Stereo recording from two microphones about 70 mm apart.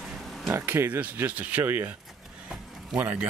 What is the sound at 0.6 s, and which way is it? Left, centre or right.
Speech, right.